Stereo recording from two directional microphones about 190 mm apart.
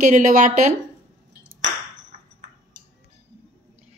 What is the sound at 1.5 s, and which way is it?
Ping, 40° right (ahead or behind).